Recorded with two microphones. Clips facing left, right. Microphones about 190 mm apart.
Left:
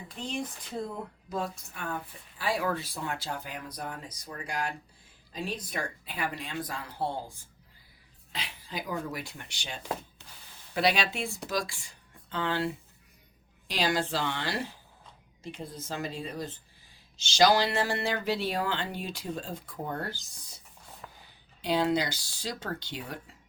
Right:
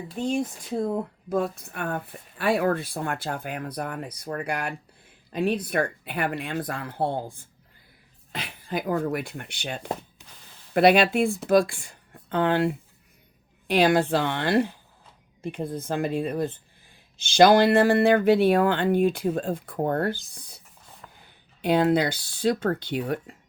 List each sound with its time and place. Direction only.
0.2 s speech: 45° right (ahead or behind)
1.3 s speech: 55° right (ahead or behind)
10.2 s a sound: 15° right (ahead or behind)
10.8 s speech: 55° right (ahead or behind)
21.6 s speech: 55° right (ahead or behind)